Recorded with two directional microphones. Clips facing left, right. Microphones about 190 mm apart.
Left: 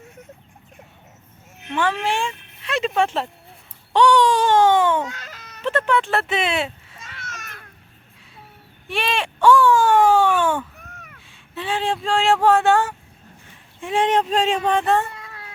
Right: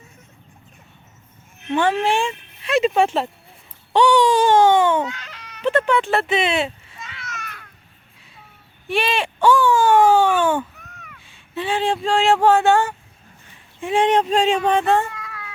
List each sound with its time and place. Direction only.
1.7 s speech: 25° right (ahead or behind); by 5.0 s centre (ahead or behind)
5.0 s baby cry: 40° left (ahead or behind)
5.6 s speech: centre (ahead or behind)
7.0 s a sound: 45° left (ahead or behind)
8.9 s wail: centre (ahead or behind)
11.3 s speech: centre (ahead or behind)
15.2 s cat: 30° left (ahead or behind)